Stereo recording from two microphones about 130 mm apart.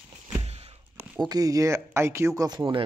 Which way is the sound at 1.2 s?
30° right (ahead or behind).